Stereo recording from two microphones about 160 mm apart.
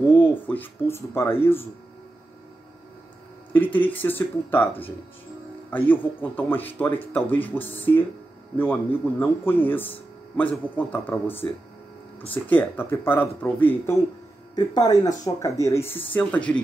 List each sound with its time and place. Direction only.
0.1 s speech: 10° left (ahead or behind)
3.5 s speech: 10° left (ahead or behind)
12.4 s speech: 10° left (ahead or behind)
14.5 s speech: 25° left (ahead or behind); by 16.6 s 10° left (ahead or behind)